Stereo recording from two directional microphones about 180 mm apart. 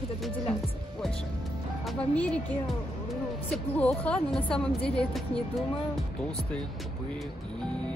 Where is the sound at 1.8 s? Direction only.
5° left (ahead or behind).